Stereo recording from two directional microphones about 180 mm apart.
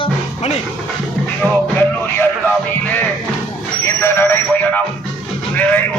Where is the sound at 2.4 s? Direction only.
10° left (ahead or behind).